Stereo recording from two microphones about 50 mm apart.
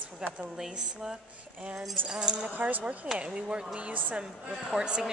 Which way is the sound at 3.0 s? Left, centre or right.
Centre.